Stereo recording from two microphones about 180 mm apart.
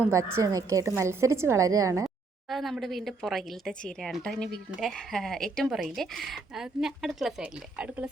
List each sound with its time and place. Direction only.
0.0 s a woman's voice: 15° right (ahead or behind)
2.5 s speech: centre (ahead or behind)